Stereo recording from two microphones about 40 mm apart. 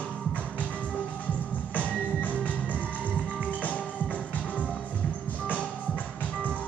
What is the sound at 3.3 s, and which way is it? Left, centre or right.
Music, left.